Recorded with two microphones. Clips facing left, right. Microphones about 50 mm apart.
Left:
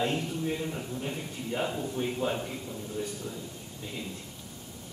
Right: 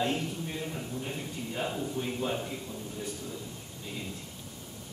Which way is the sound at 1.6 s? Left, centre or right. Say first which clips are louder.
Left 1 dB; centre.